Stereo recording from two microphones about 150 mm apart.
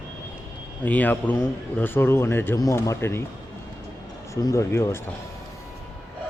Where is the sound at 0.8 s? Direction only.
10° left (ahead or behind).